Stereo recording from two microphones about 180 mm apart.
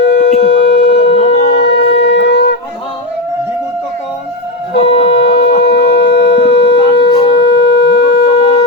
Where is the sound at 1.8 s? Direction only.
75° left (ahead or behind).